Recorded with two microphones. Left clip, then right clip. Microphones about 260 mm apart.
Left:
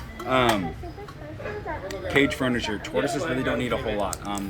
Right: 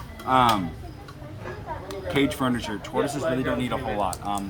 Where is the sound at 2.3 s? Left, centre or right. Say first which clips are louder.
Left 1 dB; centre.